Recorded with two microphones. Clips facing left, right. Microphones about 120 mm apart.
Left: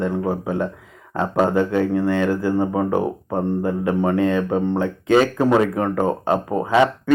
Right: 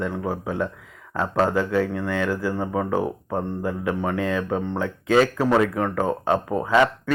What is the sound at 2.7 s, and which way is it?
Speech, 15° left (ahead or behind).